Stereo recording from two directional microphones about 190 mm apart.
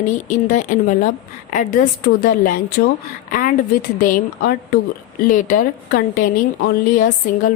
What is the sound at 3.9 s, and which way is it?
A woman's voice, 45° left (ahead or behind).